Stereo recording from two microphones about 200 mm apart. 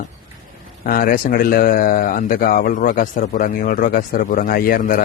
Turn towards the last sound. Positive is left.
turn(degrees=45)  # may be behind; listen again after turning